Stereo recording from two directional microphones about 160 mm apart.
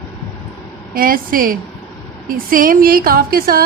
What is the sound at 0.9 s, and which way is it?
A woman's voice, 60° right (ahead or behind).